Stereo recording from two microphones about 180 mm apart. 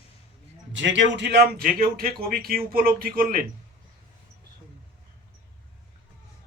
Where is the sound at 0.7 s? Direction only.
90° right; by 3.4 s 55° right (ahead or behind).